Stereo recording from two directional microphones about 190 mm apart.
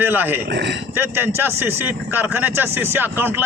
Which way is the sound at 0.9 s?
10° right (ahead or behind).